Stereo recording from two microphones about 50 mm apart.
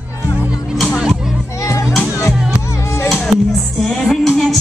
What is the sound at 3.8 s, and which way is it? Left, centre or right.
Music, centre.